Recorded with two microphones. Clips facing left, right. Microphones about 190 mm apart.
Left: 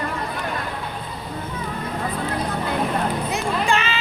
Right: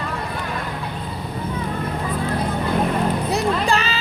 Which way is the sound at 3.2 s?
35° right (ahead or behind).